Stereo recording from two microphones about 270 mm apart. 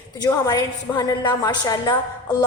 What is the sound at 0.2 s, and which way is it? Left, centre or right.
A woman's voice, centre.